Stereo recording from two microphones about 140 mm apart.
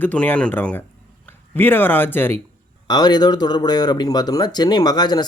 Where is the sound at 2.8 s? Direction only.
30° left (ahead or behind).